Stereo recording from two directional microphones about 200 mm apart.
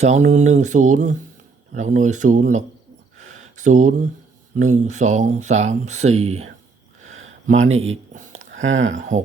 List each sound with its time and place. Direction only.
0.0 s speech: 35° right (ahead or behind)
3.2 s a sound: 35° right (ahead or behind)
4.5 s speech: 35° right (ahead or behind)
7.0 s a sound: 35° right (ahead or behind)
8.6 s speech: 75° right (ahead or behind)
8.9 s speech: 40° right (ahead or behind)